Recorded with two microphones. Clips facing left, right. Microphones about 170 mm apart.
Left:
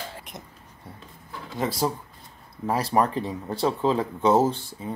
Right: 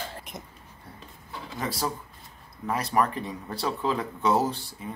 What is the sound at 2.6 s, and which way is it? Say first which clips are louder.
Speech: left 3 dB; 30° left (ahead or behind).